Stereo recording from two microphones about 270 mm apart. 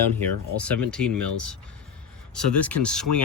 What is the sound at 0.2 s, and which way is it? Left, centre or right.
Speech, centre.